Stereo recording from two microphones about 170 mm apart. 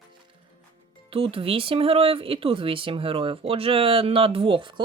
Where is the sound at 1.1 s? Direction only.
35° right (ahead or behind).